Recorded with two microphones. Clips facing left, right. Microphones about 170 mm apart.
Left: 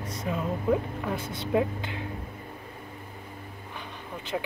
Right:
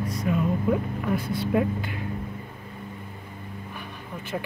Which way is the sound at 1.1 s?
25° left (ahead or behind).